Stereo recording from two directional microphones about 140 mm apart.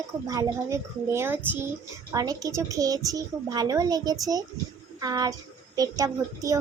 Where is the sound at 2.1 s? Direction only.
25° right (ahead or behind).